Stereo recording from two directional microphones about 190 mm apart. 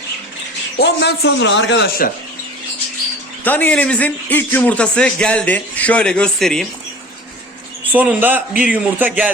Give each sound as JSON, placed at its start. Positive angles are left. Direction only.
{"t": 0.8, "sound": "a man's voice", "side_deg": 60}
{"t": 3.4, "sound": "a man's voice", "side_deg": 10}
{"t": 7.9, "sound": "a man's voice", "side_deg": -10}